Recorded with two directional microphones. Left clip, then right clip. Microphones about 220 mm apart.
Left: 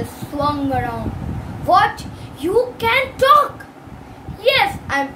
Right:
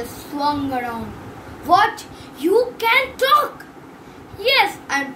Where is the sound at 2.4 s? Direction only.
15° left (ahead or behind).